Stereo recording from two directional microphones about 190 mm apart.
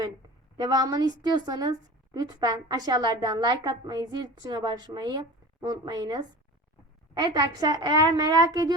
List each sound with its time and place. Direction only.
0.6 s a woman's voice: 20° right (ahead or behind)